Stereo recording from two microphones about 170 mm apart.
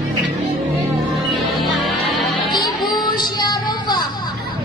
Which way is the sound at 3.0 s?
25° left (ahead or behind).